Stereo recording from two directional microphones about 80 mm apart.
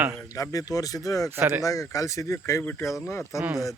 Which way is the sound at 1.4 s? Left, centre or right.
Right.